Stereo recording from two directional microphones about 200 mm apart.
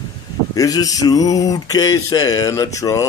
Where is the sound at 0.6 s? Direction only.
15° left (ahead or behind).